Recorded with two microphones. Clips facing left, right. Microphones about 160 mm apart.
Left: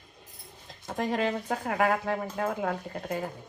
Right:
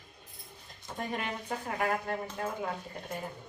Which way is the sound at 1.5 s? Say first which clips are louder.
Left 3 dB; 70° left (ahead or behind).